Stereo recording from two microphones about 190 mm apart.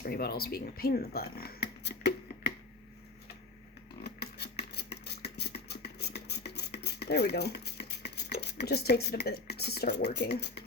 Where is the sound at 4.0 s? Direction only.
55° left (ahead or behind).